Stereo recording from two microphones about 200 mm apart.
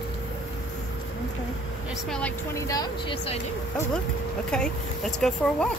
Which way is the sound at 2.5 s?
15° left (ahead or behind).